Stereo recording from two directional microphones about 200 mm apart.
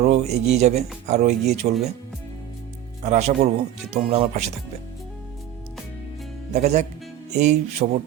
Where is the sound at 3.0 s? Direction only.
35° right (ahead or behind).